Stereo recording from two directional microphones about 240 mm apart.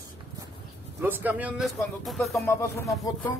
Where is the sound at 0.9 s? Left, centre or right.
Centre.